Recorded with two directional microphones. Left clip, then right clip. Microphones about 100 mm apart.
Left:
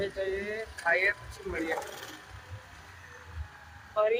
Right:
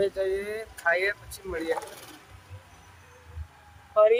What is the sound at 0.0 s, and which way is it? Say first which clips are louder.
Speech: right 6 dB; 40° right (ahead or behind).